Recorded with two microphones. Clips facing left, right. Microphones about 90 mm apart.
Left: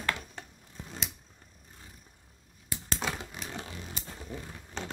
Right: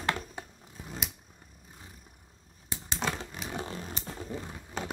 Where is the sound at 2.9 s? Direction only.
5° left (ahead or behind).